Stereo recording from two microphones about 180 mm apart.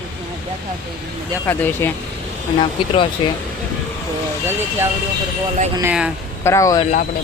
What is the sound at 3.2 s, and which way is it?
Speech, 30° left (ahead or behind).